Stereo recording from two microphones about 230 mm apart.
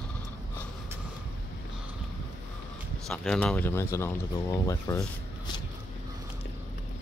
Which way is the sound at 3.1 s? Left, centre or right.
Centre.